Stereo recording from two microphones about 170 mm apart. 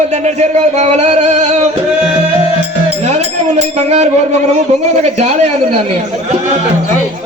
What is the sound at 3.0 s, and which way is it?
A man's voice, 40° right (ahead or behind).